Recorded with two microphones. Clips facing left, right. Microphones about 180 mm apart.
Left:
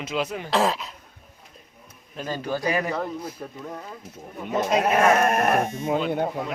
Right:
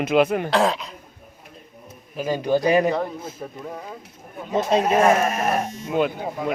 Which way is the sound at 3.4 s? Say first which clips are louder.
Right 2 dB; 10° right (ahead or behind).